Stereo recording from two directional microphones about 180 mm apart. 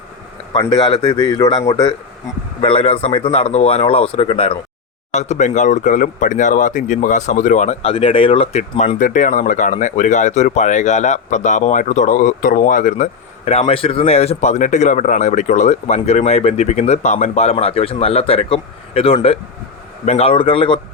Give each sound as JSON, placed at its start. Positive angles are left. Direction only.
{"t": 0.5, "sound": "a man's voice", "side_deg": 25}
{"t": 9.0, "sound": "a man's voice", "side_deg": 45}